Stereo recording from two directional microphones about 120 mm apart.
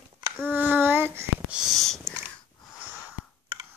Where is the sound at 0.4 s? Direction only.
15° right (ahead or behind).